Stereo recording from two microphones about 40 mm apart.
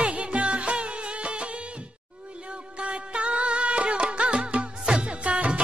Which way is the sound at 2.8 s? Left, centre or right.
Right.